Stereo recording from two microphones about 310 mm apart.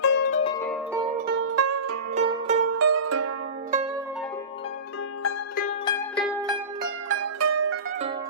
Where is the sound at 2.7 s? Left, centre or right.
Right.